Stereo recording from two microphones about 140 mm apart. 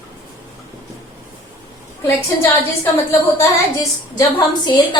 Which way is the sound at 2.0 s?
20° left (ahead or behind).